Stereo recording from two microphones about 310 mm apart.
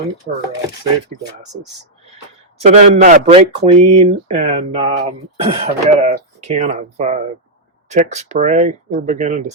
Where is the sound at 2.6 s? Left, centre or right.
Right.